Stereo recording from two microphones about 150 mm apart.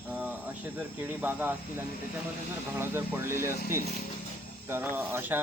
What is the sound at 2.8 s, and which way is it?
Speech, 15° right (ahead or behind).